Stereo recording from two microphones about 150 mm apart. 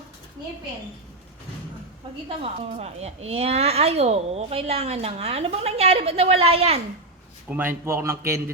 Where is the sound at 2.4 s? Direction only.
45° right (ahead or behind).